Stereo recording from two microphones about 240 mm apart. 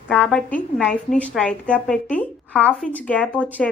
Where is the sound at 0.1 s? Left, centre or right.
Centre.